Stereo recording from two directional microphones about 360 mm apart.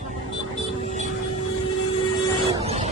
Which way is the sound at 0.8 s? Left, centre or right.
Centre.